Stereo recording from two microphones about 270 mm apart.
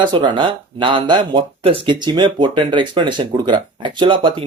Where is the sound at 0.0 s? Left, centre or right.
Centre.